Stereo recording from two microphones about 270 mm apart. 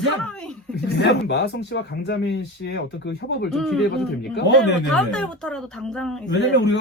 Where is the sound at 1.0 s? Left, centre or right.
Left.